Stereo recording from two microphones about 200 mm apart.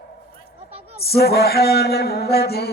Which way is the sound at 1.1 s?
55° left (ahead or behind).